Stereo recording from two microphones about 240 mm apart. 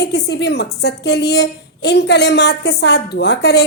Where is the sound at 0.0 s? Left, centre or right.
Left.